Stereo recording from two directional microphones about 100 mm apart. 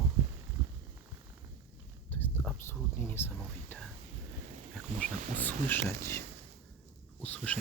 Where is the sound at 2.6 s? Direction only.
25° left (ahead or behind).